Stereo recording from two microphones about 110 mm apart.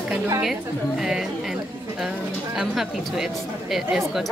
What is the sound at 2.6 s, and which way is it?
Speech, 5° right (ahead or behind).